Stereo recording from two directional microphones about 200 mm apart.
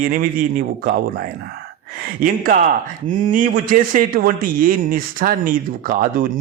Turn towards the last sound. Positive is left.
turn(degrees=-45)  # may be behind; listen again after turning